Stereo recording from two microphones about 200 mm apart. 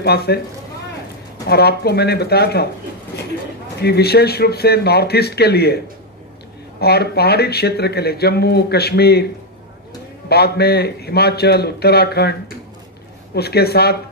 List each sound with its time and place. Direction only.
0.0 s speech: 55° left (ahead or behind)
1.5 s speech: 55° left (ahead or behind)
3.8 s speech: 55° left (ahead or behind)
6.8 s speech: 55° left (ahead or behind)
10.2 s speech: 55° left (ahead or behind)